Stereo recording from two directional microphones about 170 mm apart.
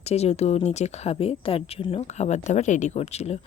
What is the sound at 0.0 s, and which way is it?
Speech, 40° left (ahead or behind).